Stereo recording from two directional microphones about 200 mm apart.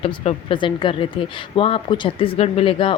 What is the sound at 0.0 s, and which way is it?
Speech, 25° left (ahead or behind).